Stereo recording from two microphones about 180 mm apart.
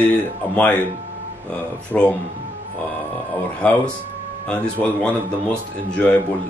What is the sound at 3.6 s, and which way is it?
Speech, 5° left (ahead or behind).